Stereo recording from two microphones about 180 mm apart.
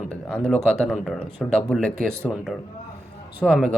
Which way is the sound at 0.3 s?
5° left (ahead or behind).